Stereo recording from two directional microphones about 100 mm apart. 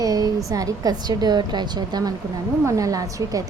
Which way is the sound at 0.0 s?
35° right (ahead or behind).